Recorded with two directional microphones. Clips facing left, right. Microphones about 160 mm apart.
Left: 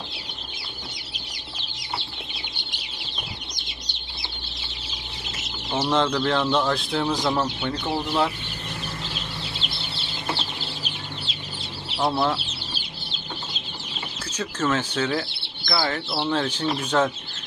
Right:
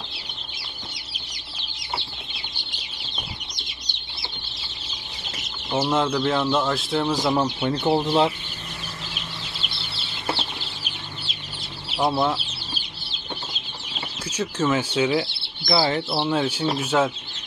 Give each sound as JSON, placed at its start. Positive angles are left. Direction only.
{"t": 5.7, "sound": "speech", "side_deg": -5}
{"t": 7.6, "sound": "speech", "side_deg": -30}
{"t": 12.0, "sound": "speech", "side_deg": -5}
{"t": 14.3, "sound": "speech", "side_deg": -10}